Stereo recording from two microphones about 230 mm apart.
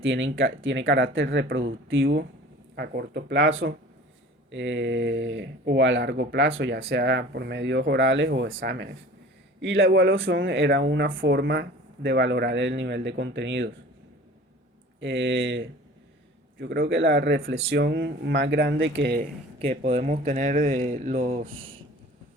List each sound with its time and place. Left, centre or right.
0.0 s speech: right
15.0 s speech: right
19.8 s speech: right